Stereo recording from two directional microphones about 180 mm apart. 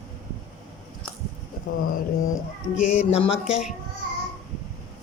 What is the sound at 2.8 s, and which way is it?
Speech, 40° left (ahead or behind).